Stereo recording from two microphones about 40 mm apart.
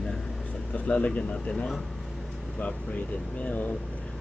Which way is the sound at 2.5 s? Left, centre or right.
Left.